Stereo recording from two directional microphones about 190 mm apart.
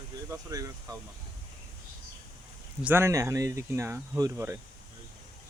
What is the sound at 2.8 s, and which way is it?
Speech, 10° right (ahead or behind).